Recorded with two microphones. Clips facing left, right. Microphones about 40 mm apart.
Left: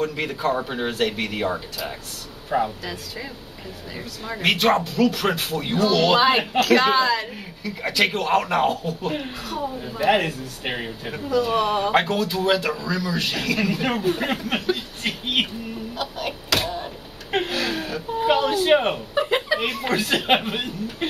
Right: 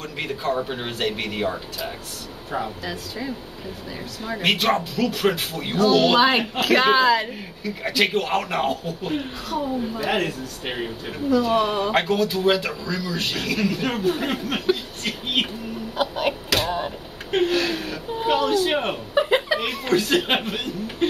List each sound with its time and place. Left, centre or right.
0.0 s speech: centre
2.6 s speech: centre
5.0 s speech: centre
10.0 s speech: centre
11.1 s speech: centre
15.0 s a sound: centre
16.0 s a sound: right
17.3 s a sound: centre
18.3 s speech: centre
19.1 s chuckle: centre
19.8 s speech: centre